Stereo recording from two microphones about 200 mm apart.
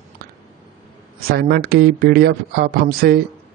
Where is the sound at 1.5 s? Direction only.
50° right (ahead or behind).